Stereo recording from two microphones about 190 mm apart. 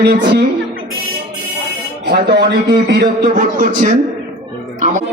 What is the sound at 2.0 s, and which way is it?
A man's voice, 60° right (ahead or behind).